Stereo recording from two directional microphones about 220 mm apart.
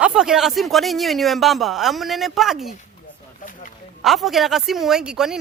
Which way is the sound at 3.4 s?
35° left (ahead or behind).